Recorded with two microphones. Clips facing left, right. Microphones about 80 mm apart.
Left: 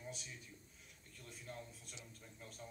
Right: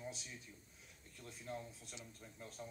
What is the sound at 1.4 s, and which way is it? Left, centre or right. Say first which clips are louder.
Speech: right 5 dB; centre.